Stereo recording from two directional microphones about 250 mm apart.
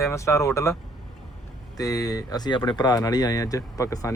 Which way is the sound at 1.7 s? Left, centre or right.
Centre.